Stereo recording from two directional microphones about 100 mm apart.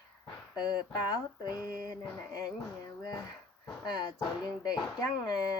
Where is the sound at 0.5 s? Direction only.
45° left (ahead or behind).